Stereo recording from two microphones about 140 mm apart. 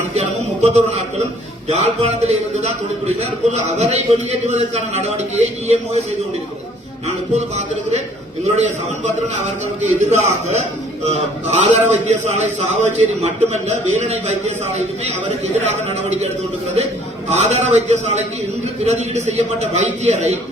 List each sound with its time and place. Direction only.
0.2 s a man's voice: 55° right (ahead or behind)
7.3 s a man's voice: 55° right (ahead or behind)
9.8 s a man's voice: 55° right (ahead or behind)
17.2 s a man's voice: 50° right (ahead or behind)